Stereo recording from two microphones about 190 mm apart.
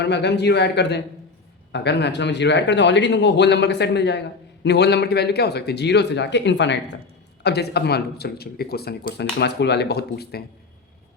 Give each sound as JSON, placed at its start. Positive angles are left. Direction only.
{"t": 0.0, "sound": "speech", "side_deg": 65}